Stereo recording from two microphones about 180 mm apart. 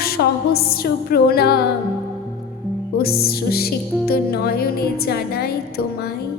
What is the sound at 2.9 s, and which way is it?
Music, 60° left (ahead or behind).